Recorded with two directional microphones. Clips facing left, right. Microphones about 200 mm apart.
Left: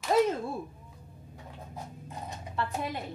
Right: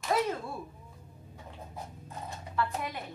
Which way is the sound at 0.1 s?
25° left (ahead or behind).